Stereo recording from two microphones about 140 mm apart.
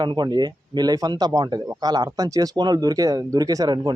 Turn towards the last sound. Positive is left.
turn(degrees=-30)  # may be behind; listen again after turning